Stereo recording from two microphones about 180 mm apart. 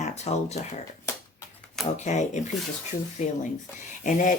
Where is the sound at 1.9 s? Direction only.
40° left (ahead or behind).